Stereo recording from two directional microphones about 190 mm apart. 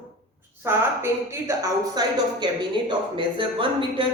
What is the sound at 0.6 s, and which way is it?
A woman's voice, 15° right (ahead or behind).